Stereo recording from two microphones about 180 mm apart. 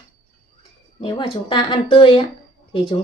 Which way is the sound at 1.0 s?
30° left (ahead or behind).